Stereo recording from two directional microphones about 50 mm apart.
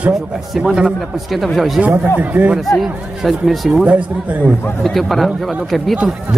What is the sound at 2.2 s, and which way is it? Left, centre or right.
Speech, right.